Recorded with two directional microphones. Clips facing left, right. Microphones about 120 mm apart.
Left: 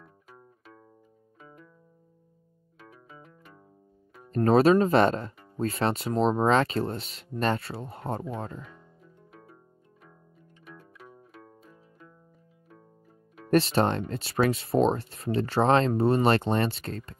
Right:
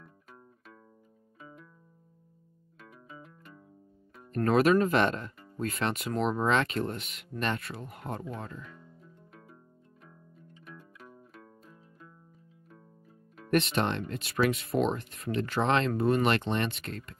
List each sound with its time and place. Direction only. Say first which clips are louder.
2.8 s music: even; centre (ahead or behind)
4.5 s speech: left 4 dB; 30° left (ahead or behind)
10.4 s pizzicato: left 1 dB; centre (ahead or behind)
13.5 s speech: left 4 dB; 30° left (ahead or behind)